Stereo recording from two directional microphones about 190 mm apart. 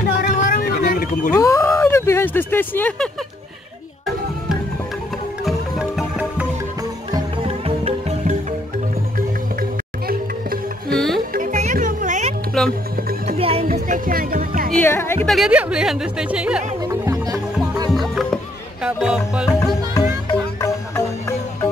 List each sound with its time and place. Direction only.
0.2 s a sound: 50° left (ahead or behind)
1.3 s speech: 15° left (ahead or behind)
5.4 s music: centre (ahead or behind)
7.1 s music: 30° right (ahead or behind)
9.6 s music: 50° right (ahead or behind)
11.3 s music: 40° right (ahead or behind)
12.6 s music: 5° left (ahead or behind)
13.4 s music: 30° right (ahead or behind)
13.7 s music: 45° right (ahead or behind)
14.8 s music: 10° left (ahead or behind)
15.2 s speech: centre (ahead or behind)
16.8 s music: 15° right (ahead or behind)
17.9 s music: centre (ahead or behind)
19.9 s music: 20° left (ahead or behind)